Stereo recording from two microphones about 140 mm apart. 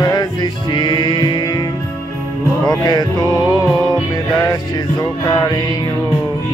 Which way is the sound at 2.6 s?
30° left (ahead or behind).